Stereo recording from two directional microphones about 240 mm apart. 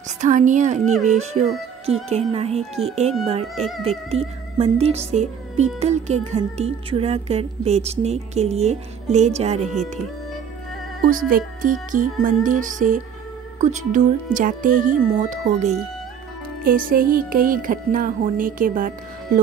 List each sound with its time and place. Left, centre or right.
0.2 s speech: right
11.1 s speech: right